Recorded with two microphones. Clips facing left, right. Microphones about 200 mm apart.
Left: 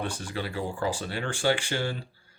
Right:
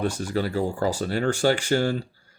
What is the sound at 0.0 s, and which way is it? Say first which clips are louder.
Speech: right 7 dB; 40° right (ahead or behind).